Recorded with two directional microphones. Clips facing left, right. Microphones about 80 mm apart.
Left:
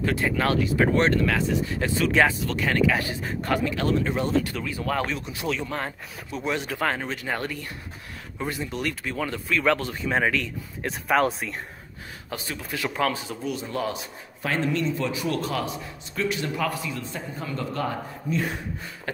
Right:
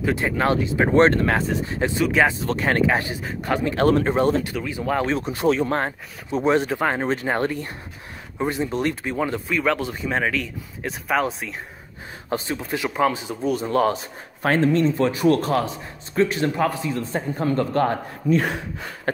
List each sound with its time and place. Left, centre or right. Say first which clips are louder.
0.0 s speech: right 3 dB; right
1.0 s speech: right 4 dB; right
1.8 s speech: right 3 dB; right
2.4 s speech: right 3 dB; right
3.6 s a man's voice: right 6 dB; right
4.6 s speech: right 3 dB; right
5.0 s speech: right 8 dB; right; by 9.9 s centre
10.0 s speech: even; centre
12.3 s speech: right 8 dB; right
13.4 s a man's voice: right 12 dB; right